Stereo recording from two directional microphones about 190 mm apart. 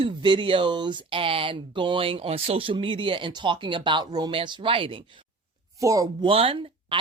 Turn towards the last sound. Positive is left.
turn(degrees=-30)  # may be behind; listen again after turning